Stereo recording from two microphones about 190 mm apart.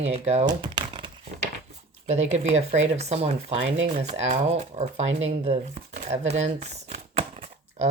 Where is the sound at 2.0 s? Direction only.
35° right (ahead or behind).